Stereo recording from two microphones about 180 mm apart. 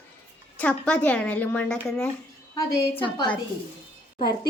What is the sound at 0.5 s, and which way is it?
Speech, 5° left (ahead or behind).